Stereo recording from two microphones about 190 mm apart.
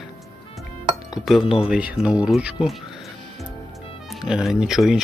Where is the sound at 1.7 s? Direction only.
5° right (ahead or behind).